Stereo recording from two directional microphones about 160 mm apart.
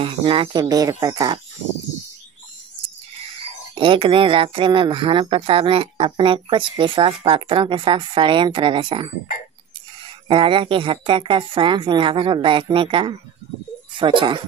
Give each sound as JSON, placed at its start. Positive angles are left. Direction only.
{"t": 0.0, "sound": "speech", "side_deg": -35}
{"t": 3.7, "sound": "speech", "side_deg": -30}
{"t": 10.2, "sound": "speech", "side_deg": -30}